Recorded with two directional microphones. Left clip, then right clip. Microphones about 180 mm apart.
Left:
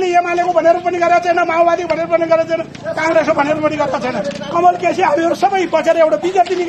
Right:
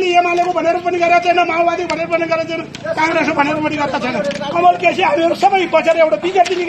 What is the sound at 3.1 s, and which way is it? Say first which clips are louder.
A man's voice: left 2 dB; 20° left (ahead or behind).